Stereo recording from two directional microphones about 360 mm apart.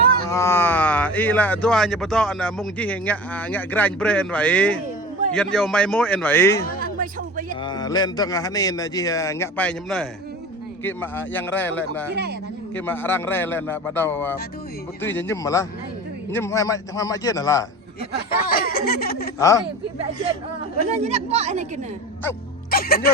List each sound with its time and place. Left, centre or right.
0.3 s speech: centre
7.0 s a sound: right
7.5 s a man's voice: centre
12.1 s a woman's voice: right
12.7 s a man's voice: centre
18.5 s a sound: left
19.4 s a man's voice: centre
21.0 s a woman's voice: centre
22.7 s speech: left